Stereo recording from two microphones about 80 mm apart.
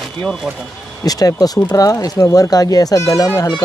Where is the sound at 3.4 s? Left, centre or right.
Left.